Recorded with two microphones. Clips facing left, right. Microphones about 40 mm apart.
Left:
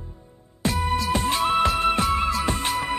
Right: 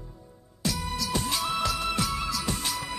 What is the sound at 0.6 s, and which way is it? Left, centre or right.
Music, left.